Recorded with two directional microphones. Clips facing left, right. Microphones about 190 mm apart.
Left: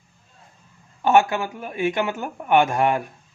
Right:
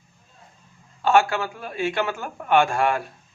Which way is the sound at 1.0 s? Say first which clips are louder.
Left 1 dB; 20° left (ahead or behind).